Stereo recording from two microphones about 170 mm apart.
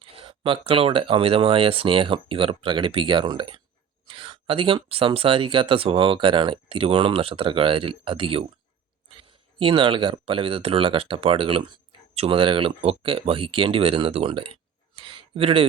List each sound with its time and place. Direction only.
0.0 s speech: 30° right (ahead or behind)